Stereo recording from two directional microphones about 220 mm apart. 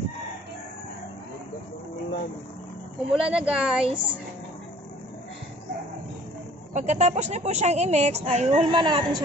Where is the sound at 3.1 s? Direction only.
5° right (ahead or behind).